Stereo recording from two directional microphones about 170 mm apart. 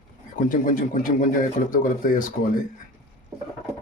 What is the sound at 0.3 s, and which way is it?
Speech, 50° left (ahead or behind).